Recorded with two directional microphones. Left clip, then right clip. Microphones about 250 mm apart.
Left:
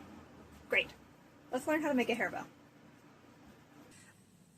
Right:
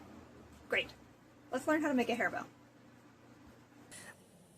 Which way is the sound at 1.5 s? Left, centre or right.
Centre.